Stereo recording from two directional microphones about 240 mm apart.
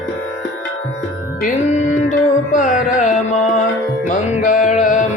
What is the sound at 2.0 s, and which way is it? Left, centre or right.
Music, left.